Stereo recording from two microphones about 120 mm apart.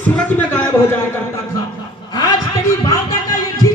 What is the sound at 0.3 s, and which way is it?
Speech, 15° left (ahead or behind).